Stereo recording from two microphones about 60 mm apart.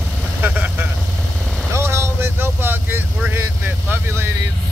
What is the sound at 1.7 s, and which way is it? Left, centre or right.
Vehicle, right.